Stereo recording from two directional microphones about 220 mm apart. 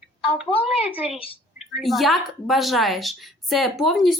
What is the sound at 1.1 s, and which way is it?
Speech, 25° left (ahead or behind).